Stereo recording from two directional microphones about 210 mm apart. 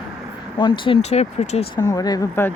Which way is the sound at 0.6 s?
25° left (ahead or behind).